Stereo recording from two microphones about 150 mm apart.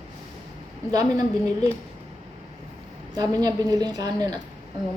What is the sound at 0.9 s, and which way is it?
Speech, 25° right (ahead or behind).